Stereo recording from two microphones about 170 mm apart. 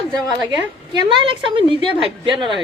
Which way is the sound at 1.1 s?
30° right (ahead or behind).